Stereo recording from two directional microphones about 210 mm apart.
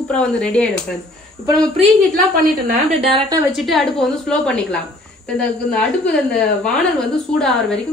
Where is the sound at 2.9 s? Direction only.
25° right (ahead or behind).